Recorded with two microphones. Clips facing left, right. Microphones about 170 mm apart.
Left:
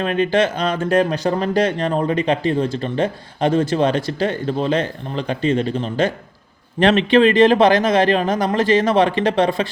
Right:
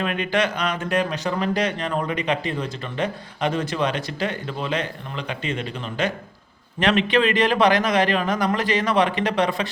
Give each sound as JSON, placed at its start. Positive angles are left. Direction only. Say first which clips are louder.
{"t": 0.0, "sound": "speech", "louder": "left 6 dB", "side_deg": 30}